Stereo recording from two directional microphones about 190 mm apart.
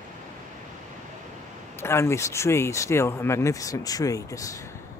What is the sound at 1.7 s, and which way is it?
Speech, 15° left (ahead or behind).